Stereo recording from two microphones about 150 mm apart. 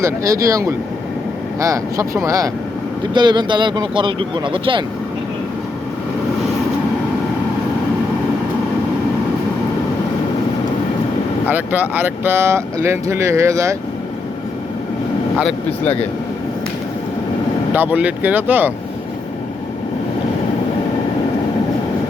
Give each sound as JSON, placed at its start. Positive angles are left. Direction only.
{"t": 0.0, "sound": "speech", "side_deg": -20}
{"t": 11.4, "sound": "speech", "side_deg": -10}
{"t": 15.4, "sound": "speech", "side_deg": 5}
{"t": 17.7, "sound": "speech", "side_deg": -10}